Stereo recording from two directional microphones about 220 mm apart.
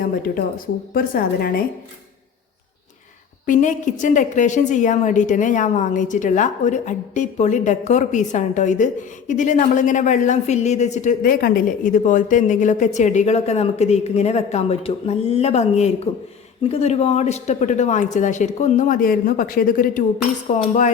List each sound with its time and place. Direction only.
0.9 s a woman's voice: 40° left (ahead or behind)
3.4 s a woman's voice: 35° left (ahead or behind)